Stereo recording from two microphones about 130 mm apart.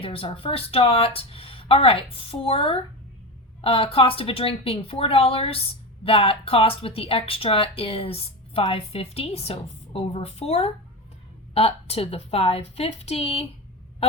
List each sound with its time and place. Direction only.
0.0 s a woman's voice: 45° left (ahead or behind)